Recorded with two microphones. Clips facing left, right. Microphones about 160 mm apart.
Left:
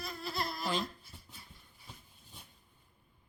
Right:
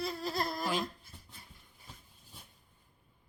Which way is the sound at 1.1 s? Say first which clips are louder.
Even; 5° left (ahead or behind).